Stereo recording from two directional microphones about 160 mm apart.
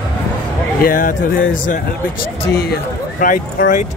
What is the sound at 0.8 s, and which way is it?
Speech, 60° left (ahead or behind).